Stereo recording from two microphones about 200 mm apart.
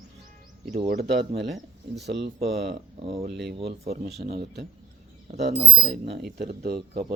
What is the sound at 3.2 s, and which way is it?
Speech, 55° right (ahead or behind).